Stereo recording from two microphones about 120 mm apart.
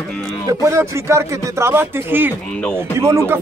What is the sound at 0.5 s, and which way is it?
Speech, 25° right (ahead or behind).